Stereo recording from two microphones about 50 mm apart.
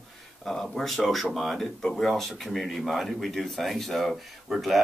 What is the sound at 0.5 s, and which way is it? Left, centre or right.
Speech, centre.